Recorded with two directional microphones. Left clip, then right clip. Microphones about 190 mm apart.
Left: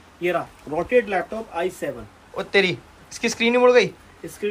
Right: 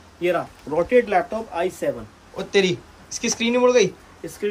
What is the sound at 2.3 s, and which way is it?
Speech, 15° right (ahead or behind).